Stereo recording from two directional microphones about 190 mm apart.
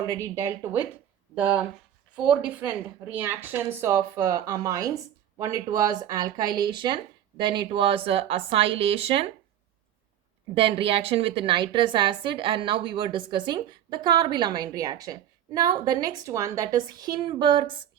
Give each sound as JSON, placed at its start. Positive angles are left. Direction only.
{"t": 0.1, "sound": "a woman's voice", "side_deg": -15}
{"t": 10.5, "sound": "a woman's voice", "side_deg": -30}